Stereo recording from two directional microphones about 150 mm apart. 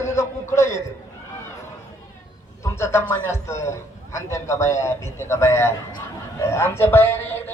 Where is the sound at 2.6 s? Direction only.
15° left (ahead or behind).